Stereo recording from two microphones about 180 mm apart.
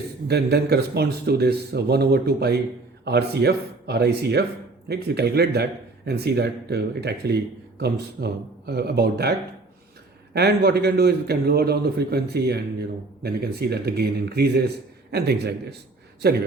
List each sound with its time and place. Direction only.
0.3 s a man's voice: 65° right (ahead or behind)
10.3 s a man's voice: 60° right (ahead or behind)